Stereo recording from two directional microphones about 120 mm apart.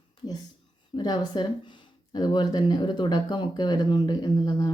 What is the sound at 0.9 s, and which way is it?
Speech, 35° left (ahead or behind).